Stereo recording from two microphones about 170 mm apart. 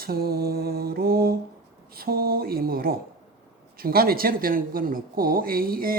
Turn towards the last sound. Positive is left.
turn(degrees=-60)  # may be behind; listen again after turning